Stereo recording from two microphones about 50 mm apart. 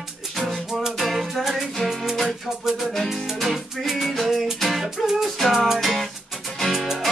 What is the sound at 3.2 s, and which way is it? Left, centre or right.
Music, centre.